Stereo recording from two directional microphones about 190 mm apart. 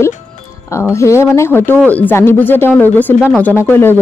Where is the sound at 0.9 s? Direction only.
15° left (ahead or behind).